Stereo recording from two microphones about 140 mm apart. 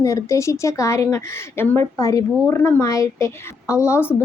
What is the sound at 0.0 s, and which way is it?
A woman's voice, 20° left (ahead or behind).